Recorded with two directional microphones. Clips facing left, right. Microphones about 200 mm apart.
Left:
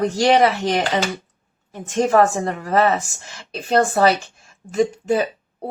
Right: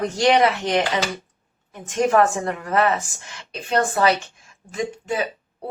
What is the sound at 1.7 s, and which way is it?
Speech, 30° left (ahead or behind).